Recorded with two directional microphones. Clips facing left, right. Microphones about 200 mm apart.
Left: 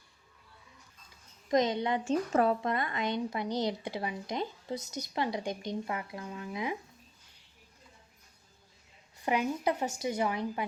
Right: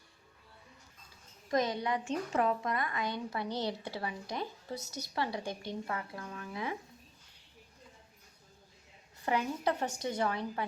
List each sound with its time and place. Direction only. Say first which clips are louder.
1.5 s a woman's voice: left 4 dB; 20° left (ahead or behind)
2.0 s speech: left 5 dB; 35° left (ahead or behind); by 6.7 s 15° left (ahead or behind)
9.2 s speech: left 2 dB; 15° left (ahead or behind)